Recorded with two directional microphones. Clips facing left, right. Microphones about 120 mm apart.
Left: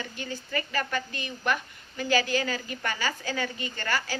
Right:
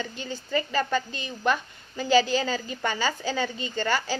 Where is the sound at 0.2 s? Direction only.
25° right (ahead or behind).